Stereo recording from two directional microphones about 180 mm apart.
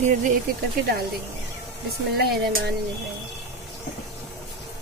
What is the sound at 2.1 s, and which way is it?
Speech, 65° right (ahead or behind).